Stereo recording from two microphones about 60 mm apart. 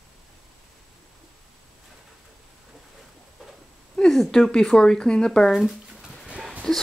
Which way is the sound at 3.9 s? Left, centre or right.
Centre.